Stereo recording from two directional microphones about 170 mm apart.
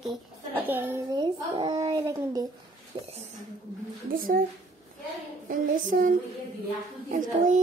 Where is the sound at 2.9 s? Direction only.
30° right (ahead or behind).